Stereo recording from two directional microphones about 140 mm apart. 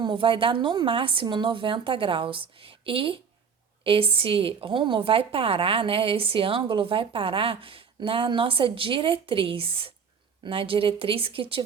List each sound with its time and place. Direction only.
0.0 s a woman's voice: 35° right (ahead or behind)